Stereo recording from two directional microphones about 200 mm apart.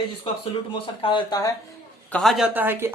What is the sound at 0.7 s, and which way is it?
Speech, 25° left (ahead or behind).